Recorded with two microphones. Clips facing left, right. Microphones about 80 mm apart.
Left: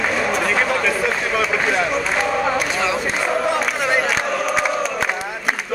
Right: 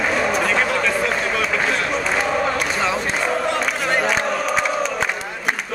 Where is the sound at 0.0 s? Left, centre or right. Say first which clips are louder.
Even; centre.